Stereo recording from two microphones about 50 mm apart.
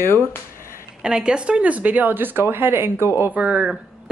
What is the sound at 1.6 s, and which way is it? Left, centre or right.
Speech, right.